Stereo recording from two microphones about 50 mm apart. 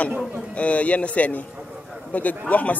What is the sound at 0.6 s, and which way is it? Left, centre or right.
Speech, left.